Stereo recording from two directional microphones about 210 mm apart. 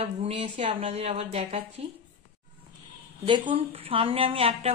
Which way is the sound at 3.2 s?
25° right (ahead or behind).